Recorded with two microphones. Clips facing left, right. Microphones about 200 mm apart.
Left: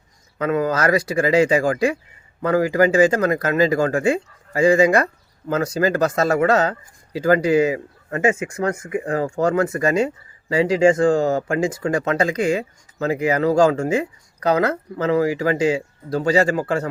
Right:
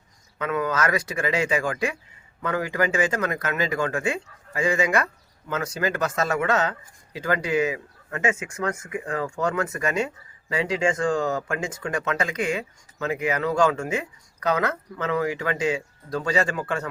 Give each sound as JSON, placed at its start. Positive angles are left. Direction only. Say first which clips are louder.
{"t": 0.3, "sound": "speech", "louder": "left 5 dB", "side_deg": 35}